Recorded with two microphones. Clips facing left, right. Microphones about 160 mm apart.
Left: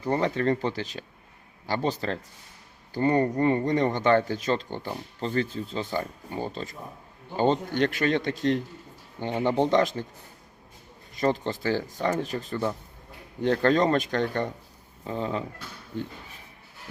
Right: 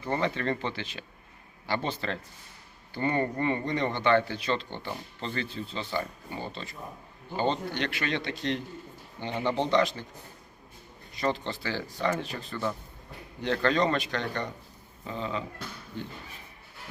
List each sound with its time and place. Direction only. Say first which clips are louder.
0.0 s a man's voice: left 4 dB; 40° left (ahead or behind)
9.3 s speech: left 4 dB; 15° left (ahead or behind)
9.6 s a man's voice: left 3 dB; 45° left (ahead or behind)
11.2 s a man's voice: left 4 dB; 45° left (ahead or behind)